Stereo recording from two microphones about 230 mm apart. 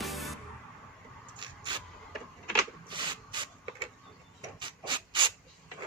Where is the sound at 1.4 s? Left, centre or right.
Centre.